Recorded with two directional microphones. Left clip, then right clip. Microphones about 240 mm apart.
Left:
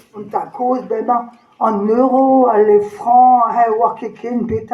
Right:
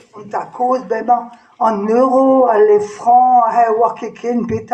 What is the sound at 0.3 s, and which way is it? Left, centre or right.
Speech, right.